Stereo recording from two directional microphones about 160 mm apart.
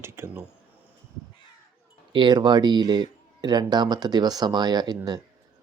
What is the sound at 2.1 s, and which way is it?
Speech, 30° right (ahead or behind).